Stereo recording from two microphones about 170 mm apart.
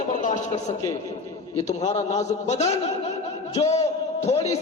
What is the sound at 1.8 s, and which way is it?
A man's voice, 40° left (ahead or behind).